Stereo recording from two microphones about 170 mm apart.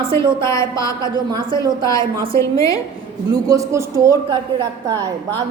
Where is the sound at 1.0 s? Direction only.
25° right (ahead or behind).